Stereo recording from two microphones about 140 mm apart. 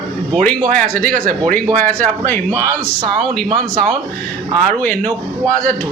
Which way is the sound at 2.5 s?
20° right (ahead or behind).